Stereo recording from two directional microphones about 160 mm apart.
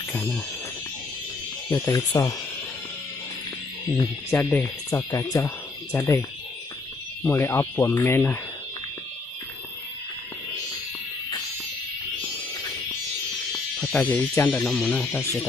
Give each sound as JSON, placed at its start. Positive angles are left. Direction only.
{"t": 1.7, "sound": "speech", "side_deg": 15}
{"t": 3.9, "sound": "speech", "side_deg": 15}
{"t": 7.3, "sound": "speech", "side_deg": 15}
{"t": 13.7, "sound": "music", "side_deg": 0}
{"t": 14.0, "sound": "speech", "side_deg": 10}